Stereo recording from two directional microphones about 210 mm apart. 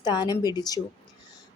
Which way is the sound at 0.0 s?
20° left (ahead or behind).